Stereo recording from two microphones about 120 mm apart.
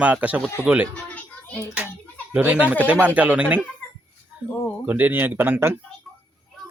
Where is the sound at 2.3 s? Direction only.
15° right (ahead or behind).